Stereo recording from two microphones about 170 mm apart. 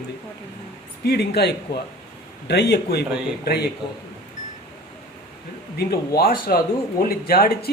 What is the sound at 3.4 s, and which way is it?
Speech, 65° left (ahead or behind).